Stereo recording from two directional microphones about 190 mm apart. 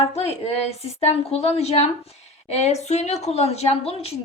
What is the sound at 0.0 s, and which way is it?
A woman's voice, 35° left (ahead or behind).